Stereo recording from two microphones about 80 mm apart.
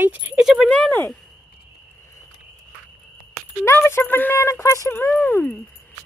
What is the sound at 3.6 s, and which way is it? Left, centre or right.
Speech, left.